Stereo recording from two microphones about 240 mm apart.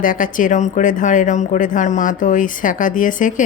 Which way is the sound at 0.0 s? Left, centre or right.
Left.